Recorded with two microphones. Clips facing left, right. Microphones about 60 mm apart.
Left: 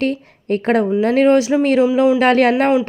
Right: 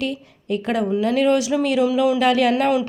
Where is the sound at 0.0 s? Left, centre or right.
Left.